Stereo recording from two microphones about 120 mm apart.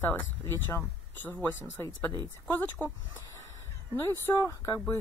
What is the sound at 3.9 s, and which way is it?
Speech, 20° left (ahead or behind).